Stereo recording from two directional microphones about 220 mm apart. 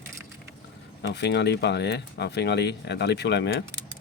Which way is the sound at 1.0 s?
50° left (ahead or behind).